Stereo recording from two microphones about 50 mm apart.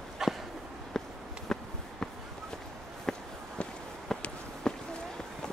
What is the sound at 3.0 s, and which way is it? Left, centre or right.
Walk, centre.